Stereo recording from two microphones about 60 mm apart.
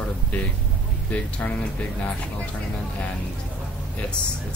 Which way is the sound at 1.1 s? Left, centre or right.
Left.